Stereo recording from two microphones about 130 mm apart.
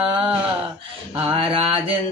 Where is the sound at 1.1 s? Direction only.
45° right (ahead or behind).